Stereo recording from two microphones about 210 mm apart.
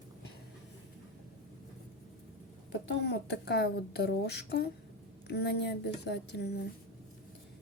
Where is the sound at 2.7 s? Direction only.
55° left (ahead or behind).